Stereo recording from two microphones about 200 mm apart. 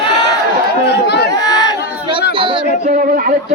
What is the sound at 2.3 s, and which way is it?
Speech, 25° right (ahead or behind).